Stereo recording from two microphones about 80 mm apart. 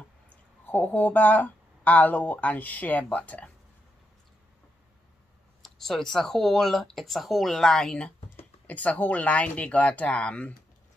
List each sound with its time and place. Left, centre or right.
0.7 s speech: left
5.6 s speech: centre